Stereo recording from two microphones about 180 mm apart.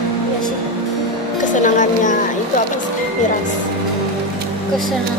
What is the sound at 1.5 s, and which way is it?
Speech, 45° left (ahead or behind).